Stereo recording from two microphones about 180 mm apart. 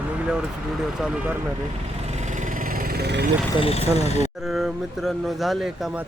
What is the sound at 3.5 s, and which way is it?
Speech, 35° left (ahead or behind).